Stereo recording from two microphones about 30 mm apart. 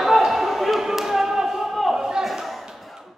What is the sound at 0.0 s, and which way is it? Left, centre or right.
Basketball bounce, centre.